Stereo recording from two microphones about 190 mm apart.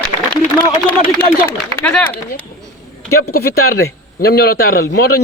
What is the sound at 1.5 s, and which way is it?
Speech, 5° left (ahead or behind).